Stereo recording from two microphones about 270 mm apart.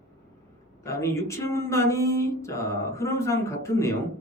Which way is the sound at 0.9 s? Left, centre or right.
Centre.